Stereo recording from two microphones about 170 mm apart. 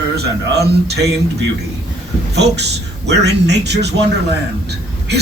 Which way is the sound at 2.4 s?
80° right.